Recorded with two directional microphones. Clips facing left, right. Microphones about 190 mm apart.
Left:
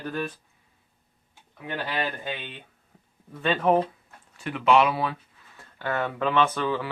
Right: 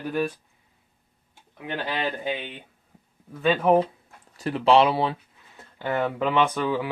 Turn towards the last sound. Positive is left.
turn(degrees=-15)  # may be behind; listen again after turning